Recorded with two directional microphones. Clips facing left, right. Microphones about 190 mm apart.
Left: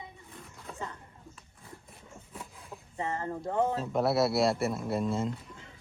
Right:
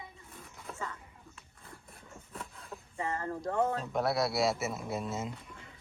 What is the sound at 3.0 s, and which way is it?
Speech, 20° left (ahead or behind).